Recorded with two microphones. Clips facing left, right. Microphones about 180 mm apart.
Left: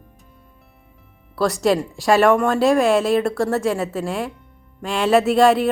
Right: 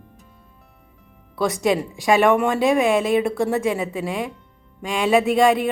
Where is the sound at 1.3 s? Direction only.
Centre (ahead or behind).